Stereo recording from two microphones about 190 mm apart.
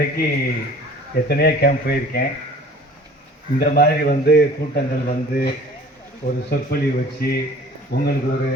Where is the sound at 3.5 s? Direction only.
55° left (ahead or behind).